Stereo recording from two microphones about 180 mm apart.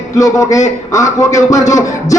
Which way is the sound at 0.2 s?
20° left (ahead or behind).